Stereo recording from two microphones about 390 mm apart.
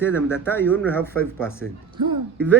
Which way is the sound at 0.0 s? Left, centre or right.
Centre.